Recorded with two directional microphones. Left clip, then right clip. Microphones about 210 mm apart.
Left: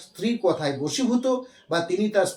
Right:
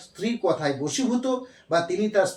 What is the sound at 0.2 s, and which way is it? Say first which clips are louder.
Speech: left 1 dB; 5° left (ahead or behind).